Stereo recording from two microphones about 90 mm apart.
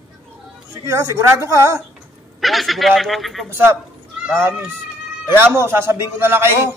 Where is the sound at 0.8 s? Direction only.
35° right (ahead or behind).